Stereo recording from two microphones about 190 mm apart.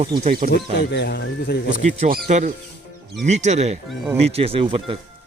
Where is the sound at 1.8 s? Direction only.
40° right (ahead or behind).